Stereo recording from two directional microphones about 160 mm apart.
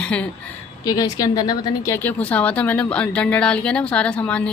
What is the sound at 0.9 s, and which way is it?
Speech, 20° left (ahead or behind).